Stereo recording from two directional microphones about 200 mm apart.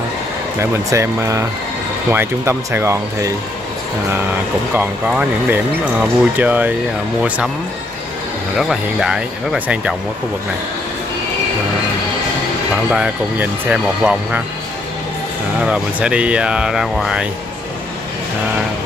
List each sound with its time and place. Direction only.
0.6 s speech: 15° right (ahead or behind)
4.7 s speech: 10° right (ahead or behind)
8.5 s speech: centre (ahead or behind)
12.9 s speech: 5° right (ahead or behind)
15.6 s speech: 5° right (ahead or behind)